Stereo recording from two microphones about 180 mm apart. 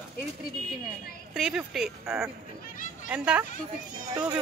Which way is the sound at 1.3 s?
5° right (ahead or behind).